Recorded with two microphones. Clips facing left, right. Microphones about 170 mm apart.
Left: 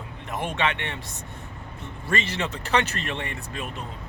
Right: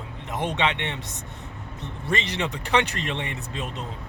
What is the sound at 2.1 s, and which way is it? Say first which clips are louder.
Speech: even; 20° right (ahead or behind).